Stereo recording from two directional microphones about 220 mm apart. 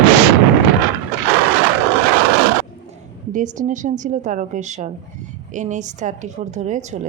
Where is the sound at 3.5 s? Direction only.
35° right (ahead or behind).